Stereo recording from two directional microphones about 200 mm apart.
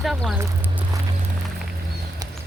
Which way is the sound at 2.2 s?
20° right (ahead or behind).